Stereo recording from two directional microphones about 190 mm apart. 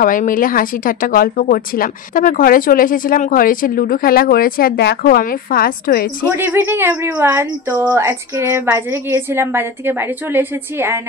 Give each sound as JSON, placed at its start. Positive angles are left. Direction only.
{"t": 0.0, "sound": "speech", "side_deg": 45}
{"t": 6.3, "sound": "speech", "side_deg": -10}